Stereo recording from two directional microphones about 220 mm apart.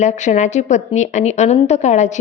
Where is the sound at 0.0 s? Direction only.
30° left (ahead or behind).